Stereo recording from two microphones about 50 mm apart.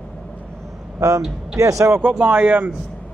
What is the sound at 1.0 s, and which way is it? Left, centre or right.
Speech, right.